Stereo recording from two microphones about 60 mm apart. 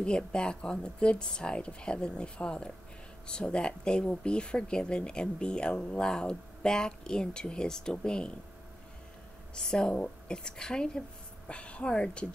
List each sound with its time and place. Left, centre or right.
0.0 s speech: centre
9.6 s speech: centre